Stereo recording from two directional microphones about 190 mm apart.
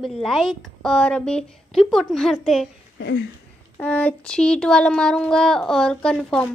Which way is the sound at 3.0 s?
65° left (ahead or behind).